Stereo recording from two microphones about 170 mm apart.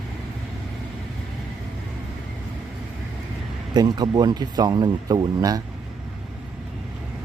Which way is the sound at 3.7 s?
25° right (ahead or behind).